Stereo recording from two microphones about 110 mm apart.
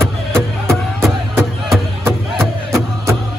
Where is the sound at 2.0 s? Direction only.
25° right (ahead or behind).